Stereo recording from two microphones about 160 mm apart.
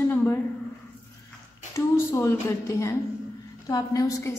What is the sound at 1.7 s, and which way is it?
A woman's voice, 15° left (ahead or behind).